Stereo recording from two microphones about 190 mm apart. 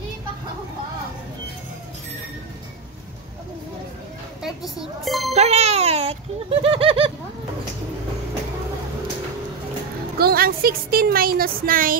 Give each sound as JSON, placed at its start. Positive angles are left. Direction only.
{"t": 5.0, "sound": "a child's voice", "side_deg": 0}
{"t": 5.3, "sound": "a sound", "side_deg": -35}
{"t": 10.1, "sound": "a woman's voice", "side_deg": -50}